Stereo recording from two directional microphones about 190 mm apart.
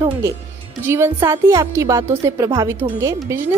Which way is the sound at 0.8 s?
15° right (ahead or behind).